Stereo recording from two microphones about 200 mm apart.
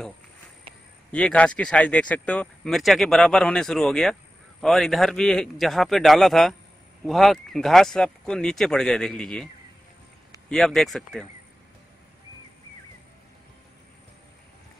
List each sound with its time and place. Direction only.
1.1 s speech: 5° left (ahead or behind)
10.5 s speech: centre (ahead or behind)